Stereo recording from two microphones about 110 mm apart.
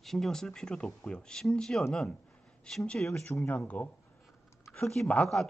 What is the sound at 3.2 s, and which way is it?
Speech, 15° left (ahead or behind).